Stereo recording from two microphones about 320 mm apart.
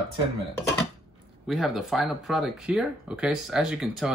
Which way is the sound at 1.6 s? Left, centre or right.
Centre.